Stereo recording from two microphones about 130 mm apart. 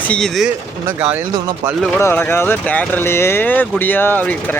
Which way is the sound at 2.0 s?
15° left (ahead or behind).